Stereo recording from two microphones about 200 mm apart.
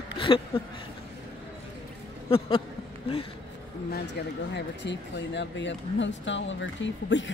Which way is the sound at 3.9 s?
55° left (ahead or behind).